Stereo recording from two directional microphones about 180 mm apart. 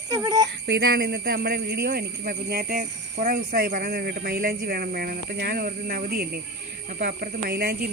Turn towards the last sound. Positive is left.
turn(degrees=-60)  # may be behind; listen again after turning